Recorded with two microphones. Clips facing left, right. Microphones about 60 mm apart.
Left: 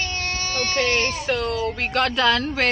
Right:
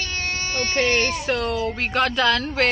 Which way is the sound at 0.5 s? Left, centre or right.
Centre.